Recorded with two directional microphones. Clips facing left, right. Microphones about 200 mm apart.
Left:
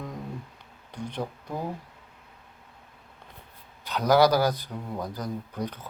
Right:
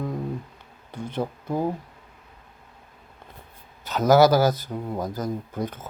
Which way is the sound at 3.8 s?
45° right (ahead or behind).